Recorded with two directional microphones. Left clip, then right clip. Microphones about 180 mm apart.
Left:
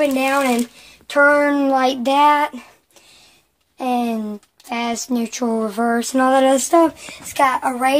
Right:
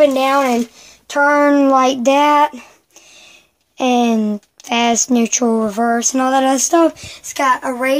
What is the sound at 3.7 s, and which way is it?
A woman's voice, 50° right (ahead or behind).